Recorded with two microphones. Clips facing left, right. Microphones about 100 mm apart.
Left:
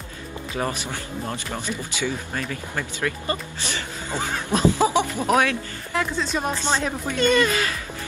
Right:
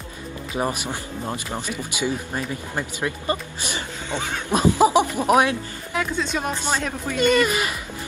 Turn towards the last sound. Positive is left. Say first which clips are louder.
# right 1 dB
turn(degrees=-15)  # may be behind; listen again after turning